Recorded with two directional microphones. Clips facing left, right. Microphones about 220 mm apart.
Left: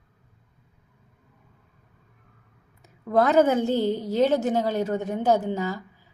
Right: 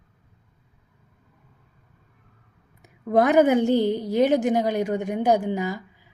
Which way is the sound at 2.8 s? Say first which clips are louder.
Right 2 dB; 15° right (ahead or behind).